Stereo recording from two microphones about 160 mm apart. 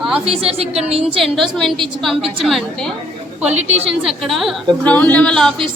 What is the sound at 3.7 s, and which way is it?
Speech, 40° right (ahead or behind).